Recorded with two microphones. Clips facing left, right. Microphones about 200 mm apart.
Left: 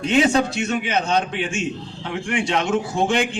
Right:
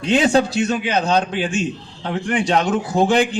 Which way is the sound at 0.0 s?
35° right (ahead or behind).